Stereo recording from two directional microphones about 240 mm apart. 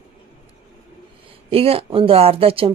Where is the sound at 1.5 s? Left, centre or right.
Right.